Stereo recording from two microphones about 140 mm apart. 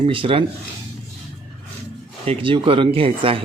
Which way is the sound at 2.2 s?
40° right (ahead or behind).